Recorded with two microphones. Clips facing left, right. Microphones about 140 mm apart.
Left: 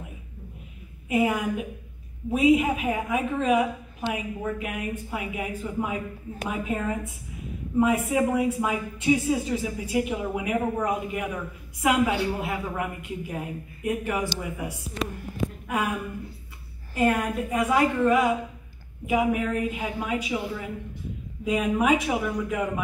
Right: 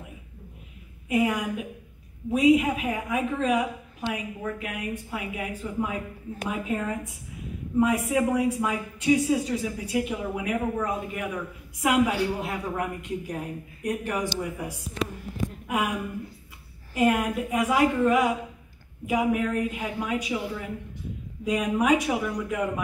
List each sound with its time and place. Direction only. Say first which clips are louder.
1.0 s a man's voice: left 1 dB; 5° left (ahead or behind)
15.6 s a sound: right 1 dB; 10° right (ahead or behind)
16.9 s speech: right 1 dB; 5° right (ahead or behind)